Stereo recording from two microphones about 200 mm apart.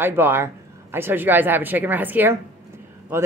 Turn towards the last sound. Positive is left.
turn(degrees=-10)  # may be behind; listen again after turning